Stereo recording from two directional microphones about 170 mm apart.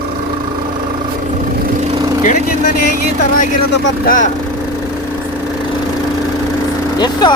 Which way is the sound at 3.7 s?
85° left.